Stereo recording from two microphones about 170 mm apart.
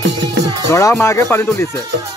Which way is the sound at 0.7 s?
20° left (ahead or behind).